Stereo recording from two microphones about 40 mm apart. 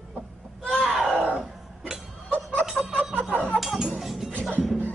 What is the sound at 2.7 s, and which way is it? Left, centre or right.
Music, centre.